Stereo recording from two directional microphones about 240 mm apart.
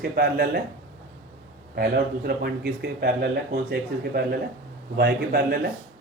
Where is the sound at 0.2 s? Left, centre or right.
Right.